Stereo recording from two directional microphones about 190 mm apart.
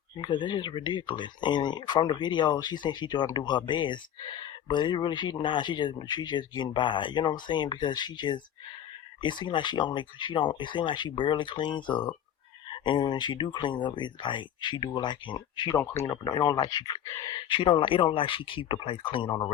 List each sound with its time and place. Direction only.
0.2 s speech: 25° left (ahead or behind)
15.8 s speech: 15° left (ahead or behind)